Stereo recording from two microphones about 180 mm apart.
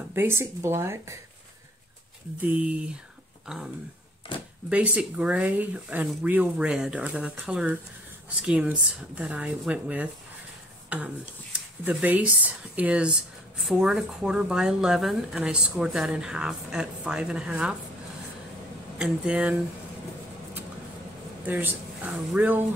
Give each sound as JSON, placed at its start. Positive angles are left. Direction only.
{"t": 0.1, "sound": "speech", "side_deg": -15}
{"t": 2.6, "sound": "speech", "side_deg": -5}
{"t": 4.3, "sound": "a sound", "side_deg": 30}
{"t": 4.6, "sound": "speech", "side_deg": -5}
{"t": 18.9, "sound": "speech", "side_deg": -5}
{"t": 21.5, "sound": "speech", "side_deg": -10}